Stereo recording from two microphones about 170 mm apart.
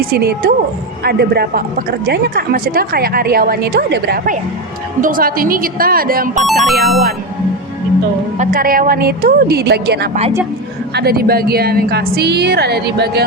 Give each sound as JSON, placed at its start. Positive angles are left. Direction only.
{"t": 0.0, "sound": "a woman's voice", "side_deg": -65}
{"t": 4.9, "sound": "a woman's voice", "side_deg": -55}
{"t": 6.4, "sound": "speech", "side_deg": 0}
{"t": 8.4, "sound": "a woman's voice", "side_deg": -55}